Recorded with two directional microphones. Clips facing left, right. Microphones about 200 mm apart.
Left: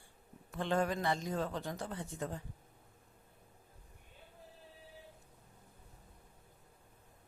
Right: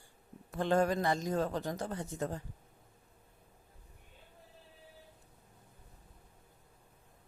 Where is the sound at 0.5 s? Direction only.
40° right (ahead or behind).